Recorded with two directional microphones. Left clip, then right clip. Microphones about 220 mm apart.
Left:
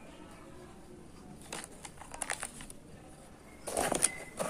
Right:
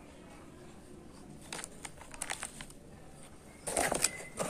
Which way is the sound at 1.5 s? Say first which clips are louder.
Even; 10° right (ahead or behind).